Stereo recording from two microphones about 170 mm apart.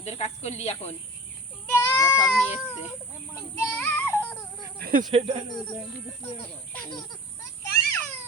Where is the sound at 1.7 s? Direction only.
15° left (ahead or behind).